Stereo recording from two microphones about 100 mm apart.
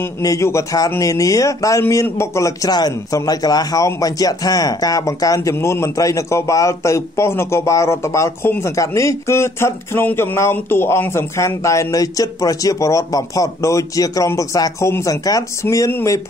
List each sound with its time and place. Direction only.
0.2 s speech: 30° left (ahead or behind)